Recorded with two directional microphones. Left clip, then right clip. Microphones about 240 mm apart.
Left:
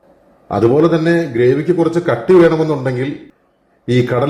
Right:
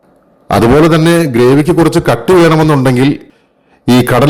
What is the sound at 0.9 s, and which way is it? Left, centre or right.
A man's voice, right.